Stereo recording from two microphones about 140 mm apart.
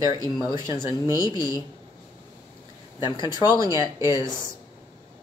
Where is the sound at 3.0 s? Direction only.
35° left (ahead or behind).